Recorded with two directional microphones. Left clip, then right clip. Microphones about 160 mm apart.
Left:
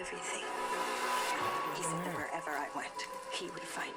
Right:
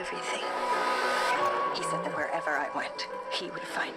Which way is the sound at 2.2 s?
35° right (ahead or behind).